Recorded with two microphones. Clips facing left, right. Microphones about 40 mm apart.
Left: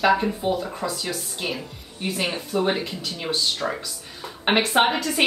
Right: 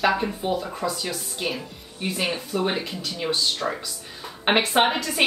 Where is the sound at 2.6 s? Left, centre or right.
Centre.